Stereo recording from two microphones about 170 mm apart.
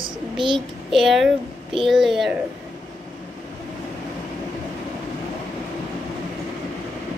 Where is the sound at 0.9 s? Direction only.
Centre (ahead or behind).